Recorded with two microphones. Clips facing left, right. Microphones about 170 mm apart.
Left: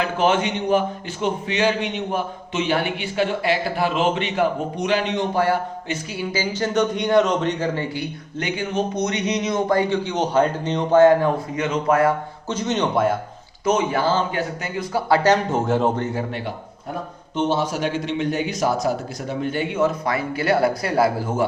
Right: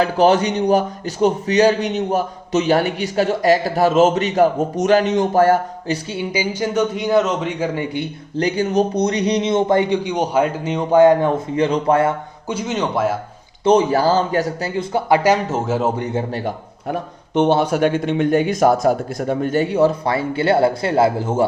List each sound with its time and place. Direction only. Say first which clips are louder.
0.0 s a man's voice: right 5 dB; 35° right (ahead or behind)
6.3 s a man's voice: right 1 dB; 10° right (ahead or behind)
8.4 s a man's voice: right 7 dB; 40° right (ahead or behind)
12.5 s speech: right 1 dB; 10° right (ahead or behind)
13.7 s a man's voice: right 5 dB; 35° right (ahead or behind)
14.8 s a man's voice: right 2 dB; 25° right (ahead or behind)
15.2 s speech: right 1 dB; 5° right (ahead or behind)
16.0 s a man's voice: right 2 dB; 15° right (ahead or behind)
16.9 s speech: right 7 dB; 65° right (ahead or behind); by 21.4 s 25° right (ahead or behind)